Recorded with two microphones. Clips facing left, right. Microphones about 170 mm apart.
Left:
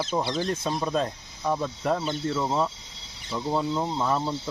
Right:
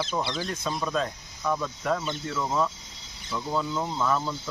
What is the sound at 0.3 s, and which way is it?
Speech, 30° left (ahead or behind).